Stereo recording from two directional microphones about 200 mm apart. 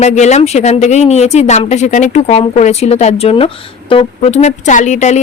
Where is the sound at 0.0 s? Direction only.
35° left (ahead or behind).